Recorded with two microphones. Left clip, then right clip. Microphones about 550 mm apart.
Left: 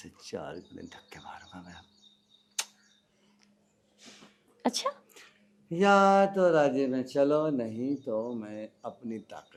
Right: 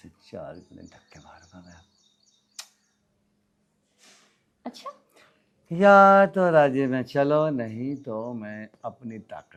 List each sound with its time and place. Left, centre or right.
0.2 s speech: centre
4.6 s a sound: left
5.6 s speech: right